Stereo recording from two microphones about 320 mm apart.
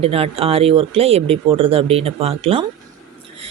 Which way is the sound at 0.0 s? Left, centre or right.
Centre.